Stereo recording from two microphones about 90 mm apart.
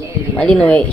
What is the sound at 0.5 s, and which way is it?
Speech, 15° left (ahead or behind).